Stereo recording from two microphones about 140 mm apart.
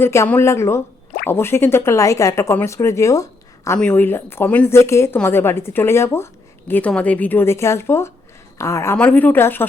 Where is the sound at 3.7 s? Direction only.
10° left (ahead or behind).